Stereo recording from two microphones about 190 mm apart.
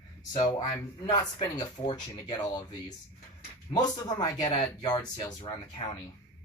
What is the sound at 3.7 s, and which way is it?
Speech, 20° left (ahead or behind).